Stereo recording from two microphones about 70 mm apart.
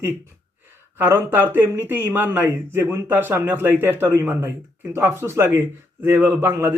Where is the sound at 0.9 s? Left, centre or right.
Right.